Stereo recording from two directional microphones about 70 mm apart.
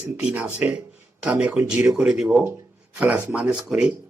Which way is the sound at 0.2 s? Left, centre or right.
Centre.